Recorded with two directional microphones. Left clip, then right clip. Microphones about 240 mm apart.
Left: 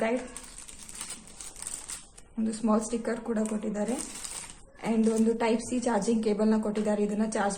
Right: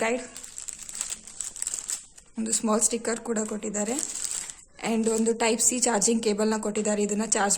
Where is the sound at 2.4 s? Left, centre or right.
Right.